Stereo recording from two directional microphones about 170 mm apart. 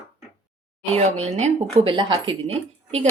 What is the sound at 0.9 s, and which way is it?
Speech, 40° right (ahead or behind).